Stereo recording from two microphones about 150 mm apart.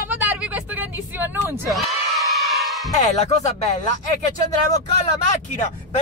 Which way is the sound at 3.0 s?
50° left (ahead or behind).